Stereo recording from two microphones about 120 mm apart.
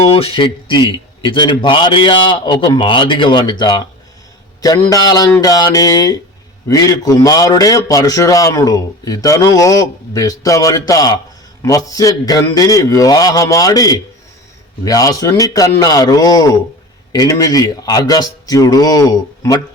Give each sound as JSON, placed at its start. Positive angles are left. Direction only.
{"t": 0.0, "sound": "a man's voice", "side_deg": 50}